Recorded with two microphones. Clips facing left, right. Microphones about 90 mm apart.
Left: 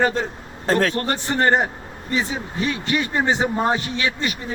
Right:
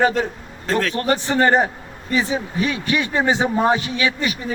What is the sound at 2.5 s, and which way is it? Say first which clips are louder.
Speech: even; 40° left (ahead or behind).